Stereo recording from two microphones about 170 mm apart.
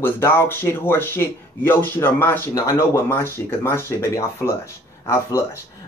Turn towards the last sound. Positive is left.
turn(degrees=15)  # may be behind; listen again after turning